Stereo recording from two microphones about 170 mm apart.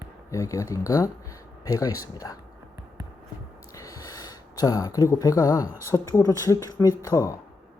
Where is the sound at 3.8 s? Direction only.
20° left (ahead or behind).